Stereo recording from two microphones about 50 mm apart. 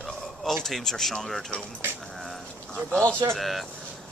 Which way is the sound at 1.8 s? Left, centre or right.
Right.